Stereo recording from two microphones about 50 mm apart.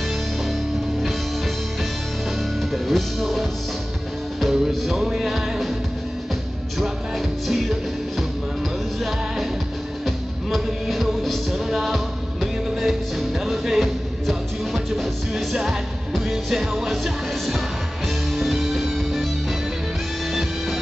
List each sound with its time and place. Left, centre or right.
2.7 s music: centre
10.0 s music: centre